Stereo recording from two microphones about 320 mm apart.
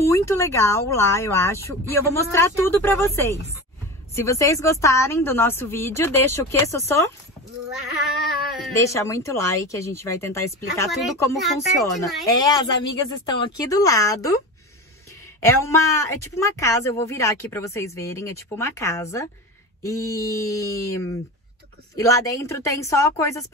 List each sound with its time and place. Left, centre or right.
0.0 s speech: centre
8.5 s speech: centre
12.3 s speech: centre
15.4 s speech: centre